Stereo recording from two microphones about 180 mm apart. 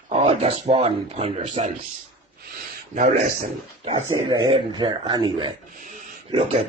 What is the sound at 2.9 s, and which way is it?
Speech, 45° right (ahead or behind).